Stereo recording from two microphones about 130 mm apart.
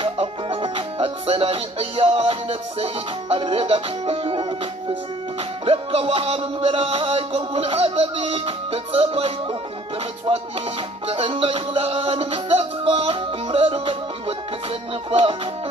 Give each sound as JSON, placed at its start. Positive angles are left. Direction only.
{"t": 0.0, "sound": "music", "side_deg": -45}
{"t": 11.1, "sound": "music", "side_deg": -45}